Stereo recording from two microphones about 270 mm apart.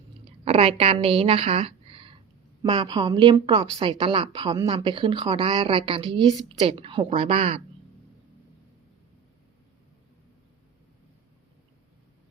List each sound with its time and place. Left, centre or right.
0.4 s a woman's voice: right